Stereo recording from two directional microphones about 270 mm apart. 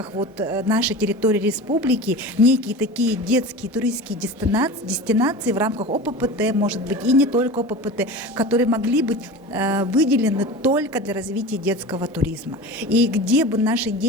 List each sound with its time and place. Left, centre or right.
0.3 s a woman's voice: centre
5.7 s a woman's voice: right
6.1 s a woman's voice: centre